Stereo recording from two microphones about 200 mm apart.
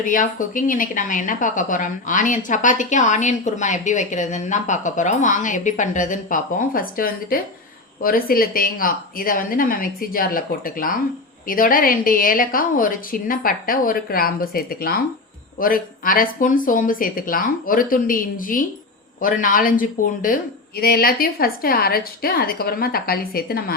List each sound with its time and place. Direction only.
0.0 s a woman's voice: 40° left (ahead or behind)